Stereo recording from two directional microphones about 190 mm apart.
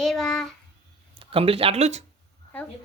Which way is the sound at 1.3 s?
30° right (ahead or behind).